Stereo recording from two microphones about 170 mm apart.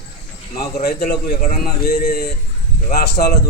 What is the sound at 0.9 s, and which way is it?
A man's voice, 65° left (ahead or behind).